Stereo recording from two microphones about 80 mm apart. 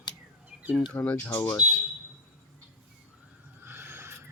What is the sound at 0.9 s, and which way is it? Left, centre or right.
Speech, centre.